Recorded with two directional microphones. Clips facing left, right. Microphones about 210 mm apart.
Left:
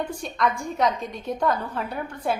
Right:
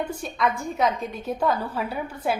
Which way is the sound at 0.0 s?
5° right (ahead or behind).